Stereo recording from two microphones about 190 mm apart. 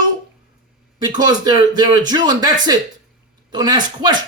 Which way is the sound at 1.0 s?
20° right (ahead or behind).